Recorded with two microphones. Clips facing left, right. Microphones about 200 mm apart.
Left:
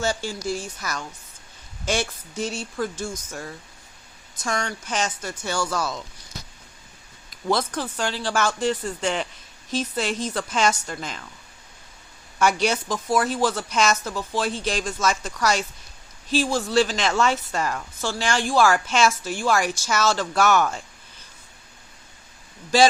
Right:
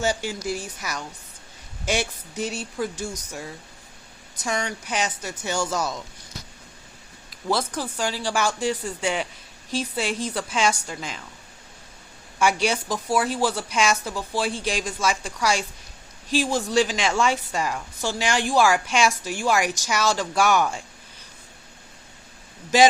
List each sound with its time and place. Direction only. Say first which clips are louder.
0.0 s a woman's voice: right 1 dB; 15° right (ahead or behind)
7.4 s a woman's voice: left 1 dB; 10° right (ahead or behind)
12.6 s a woman's voice: left 1 dB; 10° right (ahead or behind)